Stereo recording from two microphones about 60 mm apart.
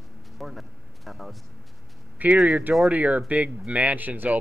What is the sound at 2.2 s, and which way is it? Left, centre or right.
A man's voice, right.